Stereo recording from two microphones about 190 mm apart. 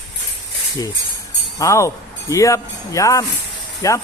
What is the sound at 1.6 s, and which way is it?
Speech, 15° left (ahead or behind).